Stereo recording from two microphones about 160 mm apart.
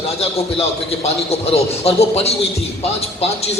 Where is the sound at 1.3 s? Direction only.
40° left (ahead or behind).